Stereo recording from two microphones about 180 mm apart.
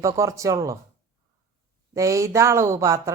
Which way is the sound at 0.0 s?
15° right (ahead or behind).